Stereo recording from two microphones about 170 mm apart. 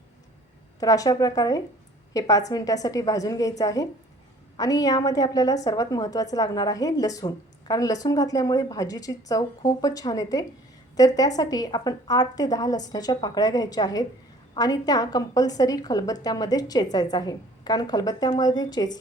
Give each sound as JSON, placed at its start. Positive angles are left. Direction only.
{"t": 0.8, "sound": "a woman's voice", "side_deg": 20}